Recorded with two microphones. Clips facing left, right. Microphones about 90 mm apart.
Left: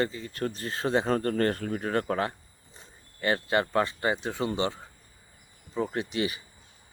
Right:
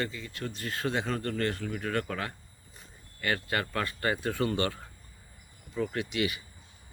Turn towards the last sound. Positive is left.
turn(degrees=35)  # may be behind; listen again after turning